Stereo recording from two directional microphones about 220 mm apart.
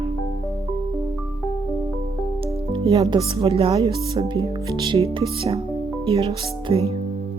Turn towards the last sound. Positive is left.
turn(degrees=-25)  # may be behind; listen again after turning